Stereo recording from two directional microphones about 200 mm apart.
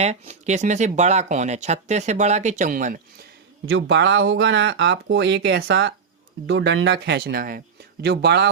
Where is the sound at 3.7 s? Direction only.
65° right (ahead or behind).